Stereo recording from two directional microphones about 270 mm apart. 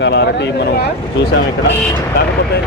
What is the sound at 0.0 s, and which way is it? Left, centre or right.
Speech, left.